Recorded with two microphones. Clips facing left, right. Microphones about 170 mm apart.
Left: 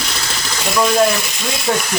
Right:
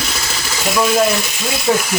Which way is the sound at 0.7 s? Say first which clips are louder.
Left 1 dB; 5° right (ahead or behind).